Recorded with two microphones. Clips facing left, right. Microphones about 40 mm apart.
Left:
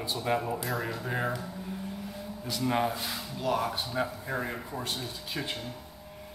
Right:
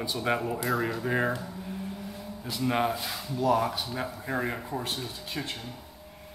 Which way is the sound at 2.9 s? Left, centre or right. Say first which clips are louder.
Right 1 dB; centre.